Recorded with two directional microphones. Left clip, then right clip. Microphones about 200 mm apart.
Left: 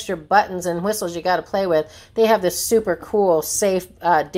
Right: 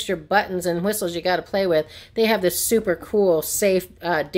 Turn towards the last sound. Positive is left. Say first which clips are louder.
# left 6 dB
turn(degrees=-20)  # may be behind; listen again after turning